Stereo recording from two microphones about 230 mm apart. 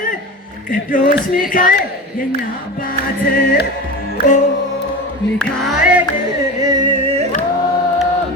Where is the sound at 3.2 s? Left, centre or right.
Left.